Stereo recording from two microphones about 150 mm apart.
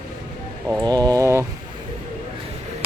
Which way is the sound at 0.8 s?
25° right (ahead or behind).